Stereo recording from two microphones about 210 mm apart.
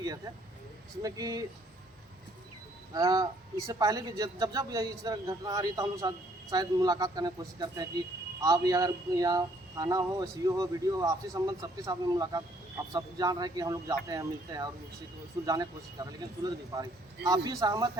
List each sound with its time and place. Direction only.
1.0 s a man's voice: 15° right (ahead or behind)
2.9 s a man's voice: 15° right (ahead or behind)